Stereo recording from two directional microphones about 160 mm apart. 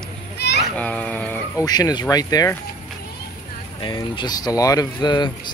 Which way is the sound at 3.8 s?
30° left (ahead or behind).